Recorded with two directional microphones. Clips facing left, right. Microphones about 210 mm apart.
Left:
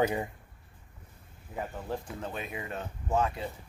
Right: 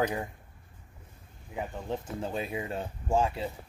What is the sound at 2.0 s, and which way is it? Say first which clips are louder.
Speech: right 4 dB; 25° right (ahead or behind).